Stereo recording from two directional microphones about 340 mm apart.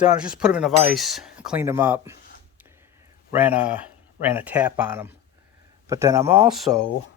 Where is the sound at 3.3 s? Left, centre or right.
Centre.